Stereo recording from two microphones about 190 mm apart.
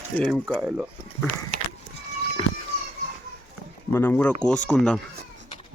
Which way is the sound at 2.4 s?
25° left (ahead or behind).